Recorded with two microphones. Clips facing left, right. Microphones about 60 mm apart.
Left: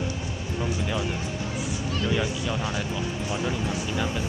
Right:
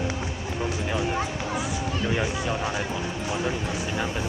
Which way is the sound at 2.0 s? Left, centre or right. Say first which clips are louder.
Even; right.